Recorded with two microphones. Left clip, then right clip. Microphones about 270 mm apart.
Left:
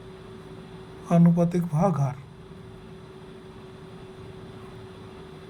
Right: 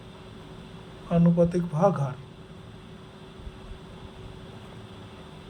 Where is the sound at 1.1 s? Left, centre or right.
Left.